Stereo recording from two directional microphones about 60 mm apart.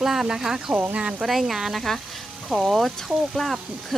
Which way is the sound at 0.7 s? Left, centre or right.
Right.